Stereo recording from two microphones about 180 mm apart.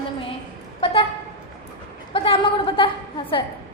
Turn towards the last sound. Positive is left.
turn(degrees=30)  # may be behind; listen again after turning